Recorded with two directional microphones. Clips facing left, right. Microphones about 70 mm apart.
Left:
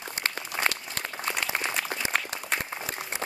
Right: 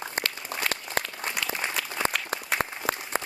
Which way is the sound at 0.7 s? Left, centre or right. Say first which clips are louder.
Left 2 dB; left.